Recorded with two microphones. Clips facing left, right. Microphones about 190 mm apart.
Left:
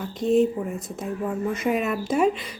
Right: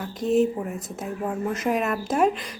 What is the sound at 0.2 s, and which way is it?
A woman's voice, 5° right (ahead or behind).